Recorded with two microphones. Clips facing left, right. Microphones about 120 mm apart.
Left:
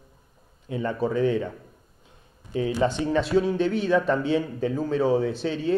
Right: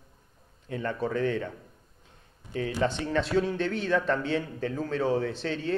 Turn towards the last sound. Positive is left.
turn(degrees=10)  # may be behind; listen again after turning